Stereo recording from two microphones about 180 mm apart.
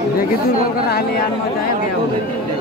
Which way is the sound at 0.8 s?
60° left (ahead or behind).